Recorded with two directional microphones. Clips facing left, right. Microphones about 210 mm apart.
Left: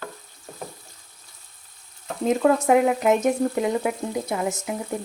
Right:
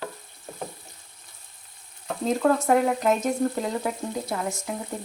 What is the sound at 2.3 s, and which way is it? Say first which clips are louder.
Speech: left 3 dB; 10° left (ahead or behind).